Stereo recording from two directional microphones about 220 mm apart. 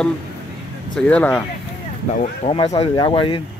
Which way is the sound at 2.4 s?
25° left (ahead or behind).